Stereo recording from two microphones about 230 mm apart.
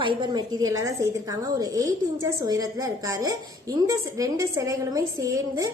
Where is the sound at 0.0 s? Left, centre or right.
Centre.